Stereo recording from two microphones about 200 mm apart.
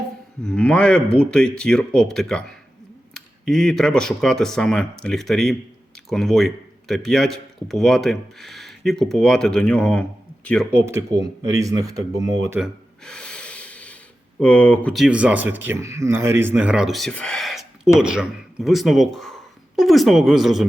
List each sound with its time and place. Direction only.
0.4 s speech: 5° left (ahead or behind)
10.7 s speech: 10° right (ahead or behind)
12.5 s gasp: centre (ahead or behind)
14.3 s speech: 5° left (ahead or behind)